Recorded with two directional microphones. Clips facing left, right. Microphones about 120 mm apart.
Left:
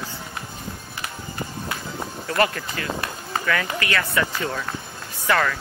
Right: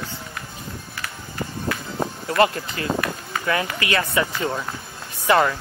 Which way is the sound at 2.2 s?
25° right (ahead or behind).